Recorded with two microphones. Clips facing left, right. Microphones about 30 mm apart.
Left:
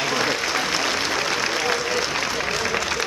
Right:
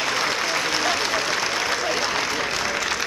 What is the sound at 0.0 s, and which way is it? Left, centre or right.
Applause, centre.